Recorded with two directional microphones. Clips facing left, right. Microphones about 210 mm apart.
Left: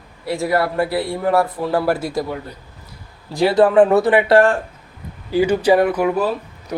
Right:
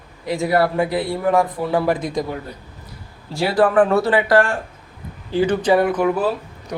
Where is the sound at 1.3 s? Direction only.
15° right (ahead or behind).